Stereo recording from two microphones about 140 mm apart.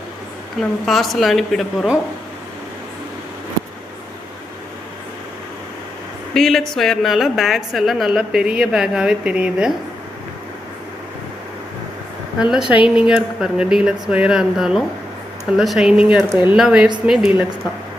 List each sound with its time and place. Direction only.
0.6 s a woman's voice: centre (ahead or behind)
6.3 s a woman's voice: centre (ahead or behind)
12.4 s a woman's voice: 5° right (ahead or behind)
16.6 s a woman's voice: 5° right (ahead or behind)